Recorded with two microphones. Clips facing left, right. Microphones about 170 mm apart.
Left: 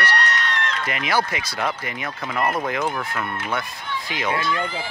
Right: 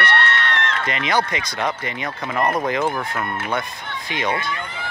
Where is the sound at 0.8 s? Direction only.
5° left (ahead or behind).